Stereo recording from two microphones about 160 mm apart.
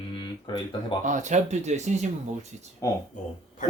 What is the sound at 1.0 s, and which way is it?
Speech, 50° right (ahead or behind).